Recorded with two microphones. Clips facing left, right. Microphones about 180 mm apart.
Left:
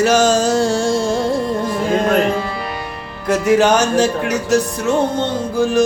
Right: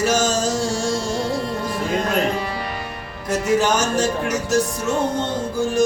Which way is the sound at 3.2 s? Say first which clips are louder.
Left 5 dB; 60° left (ahead or behind).